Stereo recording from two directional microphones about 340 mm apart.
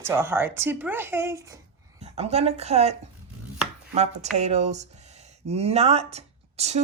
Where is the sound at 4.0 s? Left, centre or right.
Centre.